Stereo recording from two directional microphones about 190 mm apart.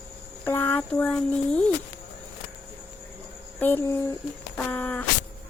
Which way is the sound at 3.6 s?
10° left (ahead or behind).